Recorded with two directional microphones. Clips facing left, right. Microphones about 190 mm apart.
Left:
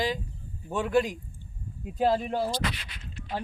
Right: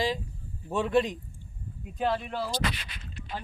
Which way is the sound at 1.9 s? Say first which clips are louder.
Left 4 dB; 35° left (ahead or behind).